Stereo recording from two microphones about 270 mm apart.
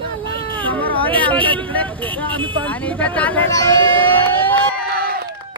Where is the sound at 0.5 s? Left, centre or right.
Centre.